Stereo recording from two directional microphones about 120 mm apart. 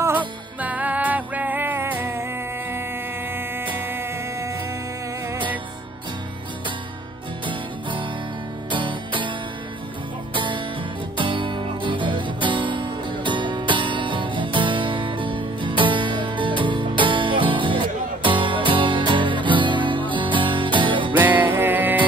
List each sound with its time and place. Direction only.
0.6 s music: 15° right (ahead or behind)
3.3 s music: 15° right (ahead or behind)
7.4 s music: 45° right (ahead or behind)
10.3 s music: 45° right (ahead or behind)
21.2 s music: 15° right (ahead or behind)